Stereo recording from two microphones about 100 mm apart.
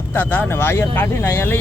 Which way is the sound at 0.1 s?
20° left (ahead or behind).